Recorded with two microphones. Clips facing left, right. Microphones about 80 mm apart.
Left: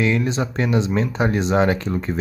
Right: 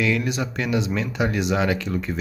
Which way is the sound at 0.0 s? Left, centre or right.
Left.